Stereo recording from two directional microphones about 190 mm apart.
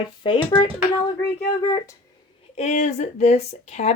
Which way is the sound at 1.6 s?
15° left (ahead or behind).